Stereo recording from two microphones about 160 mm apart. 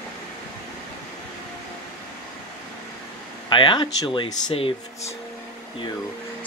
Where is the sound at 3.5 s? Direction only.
30° left (ahead or behind).